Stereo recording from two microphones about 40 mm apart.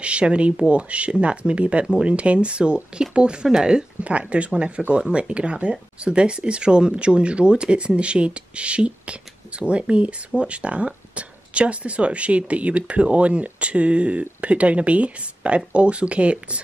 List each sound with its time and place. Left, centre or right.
0.0 s speech: right